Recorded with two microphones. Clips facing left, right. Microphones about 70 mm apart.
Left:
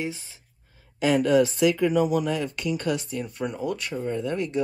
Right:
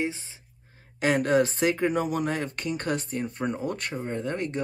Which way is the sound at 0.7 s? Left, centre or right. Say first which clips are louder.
Left 2 dB; right.